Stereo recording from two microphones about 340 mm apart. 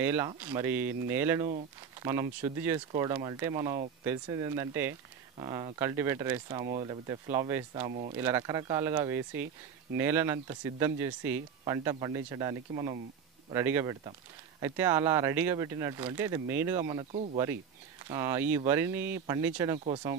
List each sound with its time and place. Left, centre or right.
0.0 s speech: centre
7.9 s speech: centre
8.2 s speech: centre